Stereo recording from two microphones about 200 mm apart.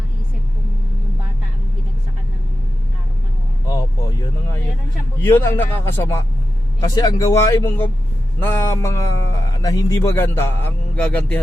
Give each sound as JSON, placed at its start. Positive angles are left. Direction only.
{"t": 5.2, "sound": "a man's voice", "side_deg": 10}